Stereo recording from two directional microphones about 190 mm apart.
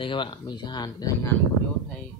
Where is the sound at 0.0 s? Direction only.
25° left (ahead or behind).